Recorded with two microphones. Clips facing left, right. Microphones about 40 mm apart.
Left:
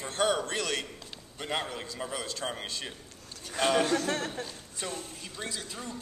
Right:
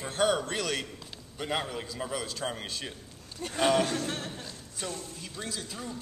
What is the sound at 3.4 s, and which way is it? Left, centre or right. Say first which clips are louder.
Speech: right 7 dB; right.